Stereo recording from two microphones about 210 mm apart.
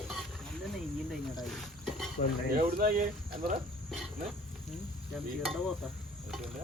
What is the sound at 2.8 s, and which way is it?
Speech, 40° right (ahead or behind).